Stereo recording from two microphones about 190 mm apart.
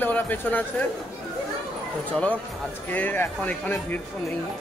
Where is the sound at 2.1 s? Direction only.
5° left (ahead or behind).